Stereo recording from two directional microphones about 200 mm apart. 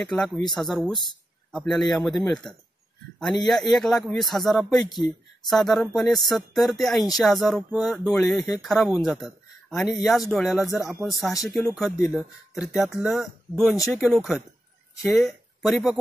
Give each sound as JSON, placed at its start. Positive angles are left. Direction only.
{"t": 0.0, "sound": "speech", "side_deg": 0}
{"t": 1.5, "sound": "speech", "side_deg": 0}
{"t": 9.9, "sound": "speech", "side_deg": 0}